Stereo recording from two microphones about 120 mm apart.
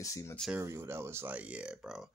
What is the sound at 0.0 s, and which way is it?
Speech, 25° left (ahead or behind).